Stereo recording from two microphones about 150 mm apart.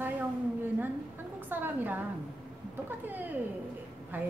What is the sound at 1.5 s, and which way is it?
Speech, 15° right (ahead or behind).